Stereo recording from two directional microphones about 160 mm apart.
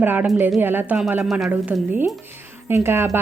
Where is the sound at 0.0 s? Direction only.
10° right (ahead or behind).